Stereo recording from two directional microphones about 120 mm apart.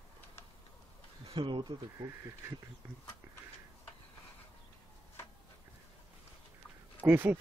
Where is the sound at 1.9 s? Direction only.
25° right (ahead or behind).